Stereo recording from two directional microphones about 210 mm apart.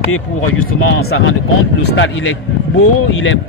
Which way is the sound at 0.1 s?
75° left (ahead or behind).